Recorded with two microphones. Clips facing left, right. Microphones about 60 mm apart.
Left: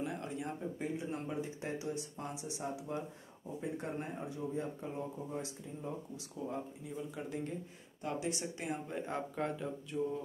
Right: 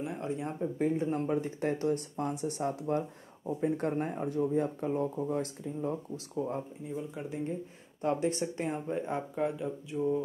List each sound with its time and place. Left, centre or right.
0.1 s speech: right
0.7 s speech: right
7.2 s speech: right
8.0 s speech: right
9.3 s speech: centre